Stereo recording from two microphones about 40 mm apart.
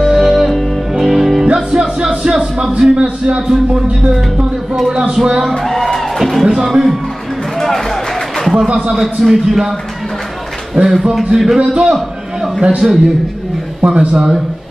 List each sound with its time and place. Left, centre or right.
0.0 s music: centre
1.5 s music: centre
2.9 s speech: right
3.4 s speech: centre
5.6 s speech: centre
5.9 s music: centre
6.4 s music: centre
7.5 s music: centre
8.6 s speech: right
8.9 s a man's voice: centre
11.8 s a sound: centre
12.8 s a man's voice: centre
13.8 s speech: right